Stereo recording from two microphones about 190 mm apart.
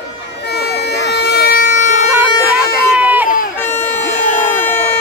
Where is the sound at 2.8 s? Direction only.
10° right (ahead or behind).